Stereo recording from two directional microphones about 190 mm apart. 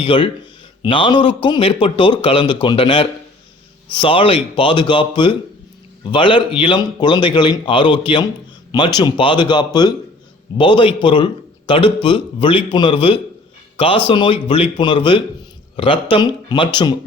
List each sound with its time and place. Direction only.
0.0 s a man's voice: 25° left (ahead or behind)